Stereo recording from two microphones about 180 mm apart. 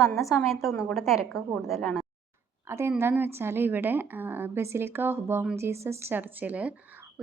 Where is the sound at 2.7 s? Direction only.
15° right (ahead or behind).